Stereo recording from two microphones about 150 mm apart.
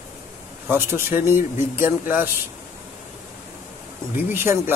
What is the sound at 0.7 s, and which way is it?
Speech, 15° right (ahead or behind).